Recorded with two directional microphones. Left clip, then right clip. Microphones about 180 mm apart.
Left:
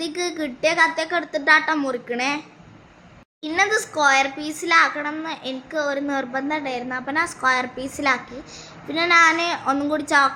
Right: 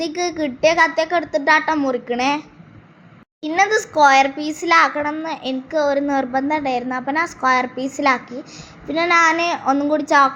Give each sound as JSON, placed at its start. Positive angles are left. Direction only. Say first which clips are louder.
{"t": 0.0, "sound": "a woman's voice", "louder": "right 4 dB", "side_deg": -15}
{"t": 3.4, "sound": "a child's voice", "louder": "right 3 dB", "side_deg": -20}